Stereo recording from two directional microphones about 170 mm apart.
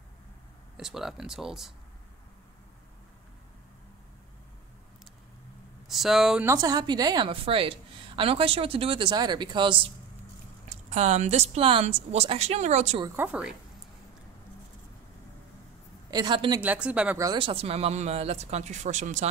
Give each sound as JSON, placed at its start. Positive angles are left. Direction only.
{"t": 0.7, "sound": "speech", "side_deg": 0}
{"t": 5.9, "sound": "speech", "side_deg": 0}
{"t": 6.4, "sound": "a woman's voice", "side_deg": -20}
{"t": 10.9, "sound": "a woman's voice", "side_deg": -40}
{"t": 13.1, "sound": "speech", "side_deg": -10}
{"t": 16.1, "sound": "a woman's voice", "side_deg": -25}
{"t": 16.6, "sound": "speech", "side_deg": -5}
{"t": 17.2, "sound": "a woman's voice", "side_deg": -25}